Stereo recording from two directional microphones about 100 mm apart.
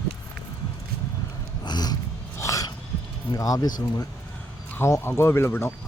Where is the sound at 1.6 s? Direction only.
45° left (ahead or behind).